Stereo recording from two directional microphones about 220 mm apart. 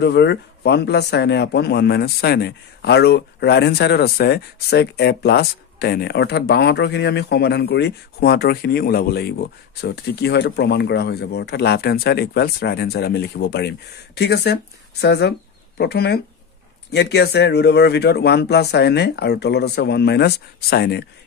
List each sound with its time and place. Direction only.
0.0 s speech: 50° left (ahead or behind)